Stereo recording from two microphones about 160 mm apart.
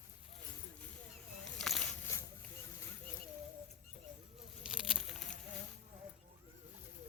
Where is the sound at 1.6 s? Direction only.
5° left (ahead or behind).